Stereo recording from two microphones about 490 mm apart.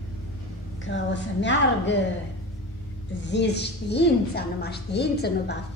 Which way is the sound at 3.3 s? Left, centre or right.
Centre.